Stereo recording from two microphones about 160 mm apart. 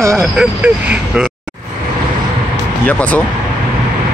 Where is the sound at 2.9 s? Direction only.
10° left (ahead or behind).